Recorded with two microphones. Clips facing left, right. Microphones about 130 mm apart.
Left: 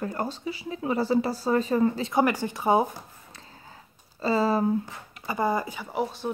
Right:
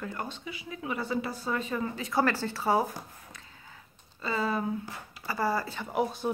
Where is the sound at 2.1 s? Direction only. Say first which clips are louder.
Left 4 dB; 15° left (ahead or behind).